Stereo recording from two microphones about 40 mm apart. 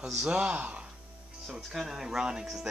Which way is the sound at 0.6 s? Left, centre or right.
Right.